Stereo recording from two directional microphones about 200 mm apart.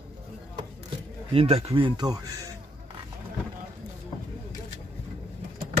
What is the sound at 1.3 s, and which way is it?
Speech, 30° right (ahead or behind).